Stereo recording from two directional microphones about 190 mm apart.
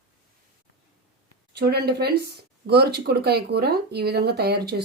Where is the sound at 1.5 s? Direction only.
60° right (ahead or behind).